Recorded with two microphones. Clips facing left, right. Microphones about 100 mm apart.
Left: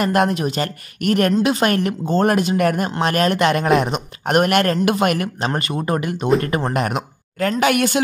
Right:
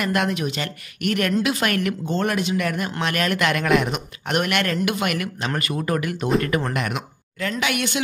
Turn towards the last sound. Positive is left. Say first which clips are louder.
# left 7 dB
turn(degrees=45)  # may be behind; listen again after turning